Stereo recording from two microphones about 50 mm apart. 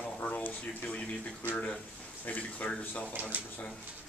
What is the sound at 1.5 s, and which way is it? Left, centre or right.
Speech, left.